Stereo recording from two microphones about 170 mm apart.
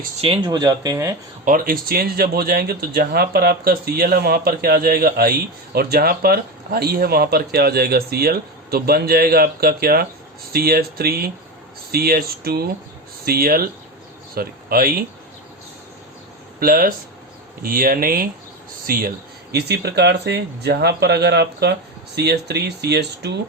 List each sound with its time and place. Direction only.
0.2 s speech: 25° right (ahead or behind)
1.5 s speech: 55° right (ahead or behind)
16.6 s speech: 60° right (ahead or behind); by 23.3 s 75° right (ahead or behind)